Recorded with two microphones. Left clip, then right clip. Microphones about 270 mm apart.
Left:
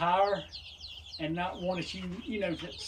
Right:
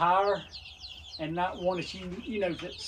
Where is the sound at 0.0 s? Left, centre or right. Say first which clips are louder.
Right 2 dB; centre.